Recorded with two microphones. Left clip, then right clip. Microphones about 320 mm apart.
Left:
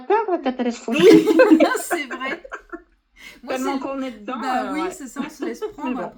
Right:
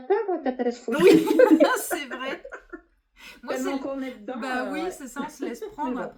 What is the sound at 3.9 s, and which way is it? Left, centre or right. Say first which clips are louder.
Speech: left 4 dB; left.